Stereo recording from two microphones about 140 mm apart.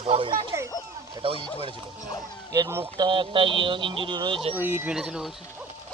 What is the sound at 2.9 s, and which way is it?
Speech, 35° right (ahead or behind).